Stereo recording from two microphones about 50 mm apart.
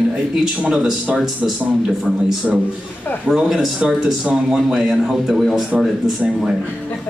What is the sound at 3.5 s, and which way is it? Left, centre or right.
A man's voice, centre.